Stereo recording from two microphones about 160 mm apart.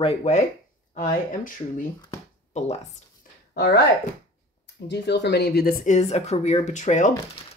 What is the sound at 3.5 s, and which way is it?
Speech, 90° left.